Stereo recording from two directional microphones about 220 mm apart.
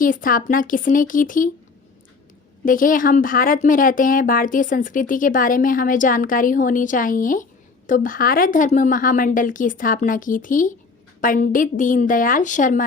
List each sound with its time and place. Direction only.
0.0 s speech: 40° left (ahead or behind)
2.6 s speech: 40° left (ahead or behind)